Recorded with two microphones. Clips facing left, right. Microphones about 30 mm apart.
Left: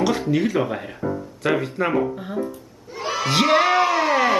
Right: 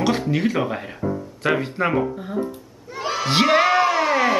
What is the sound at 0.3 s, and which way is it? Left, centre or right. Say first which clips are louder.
Speech: left 1 dB; centre.